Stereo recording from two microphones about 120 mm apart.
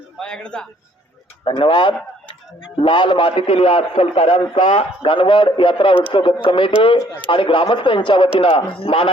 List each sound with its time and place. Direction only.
0.2 s a man's voice: 5° left (ahead or behind)
1.5 s a man's voice: 45° left (ahead or behind)